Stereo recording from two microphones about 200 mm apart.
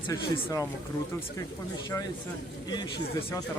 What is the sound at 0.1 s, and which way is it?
Speech, 15° left (ahead or behind).